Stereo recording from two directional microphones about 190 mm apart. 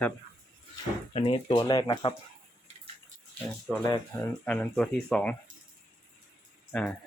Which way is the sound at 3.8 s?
20° left (ahead or behind).